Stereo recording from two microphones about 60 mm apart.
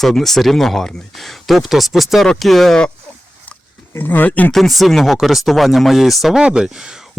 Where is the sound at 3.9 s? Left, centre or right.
Left.